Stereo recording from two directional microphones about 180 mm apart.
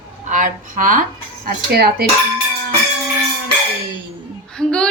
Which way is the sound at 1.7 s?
60° right (ahead or behind).